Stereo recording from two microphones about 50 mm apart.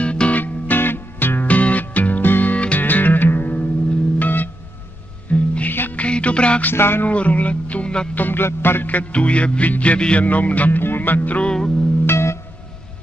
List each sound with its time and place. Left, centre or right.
0.0 s music: left
0.4 s music: left
5.3 s music: left
5.7 s music: left
5.9 s music: left
6.6 s music: left
7.1 s speech: left
8.1 s music: left
10.8 s speech: left
11.4 s music: centre
12.1 s music: left